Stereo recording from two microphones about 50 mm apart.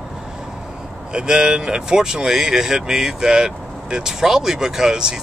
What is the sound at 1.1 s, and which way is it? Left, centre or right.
Speech, centre.